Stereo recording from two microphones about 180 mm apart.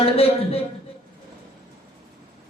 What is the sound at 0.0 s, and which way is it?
Speech, 35° left (ahead or behind).